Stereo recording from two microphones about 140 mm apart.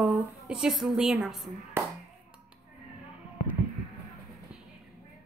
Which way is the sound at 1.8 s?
15° right (ahead or behind).